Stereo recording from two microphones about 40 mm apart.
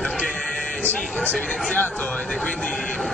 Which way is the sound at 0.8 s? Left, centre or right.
Left.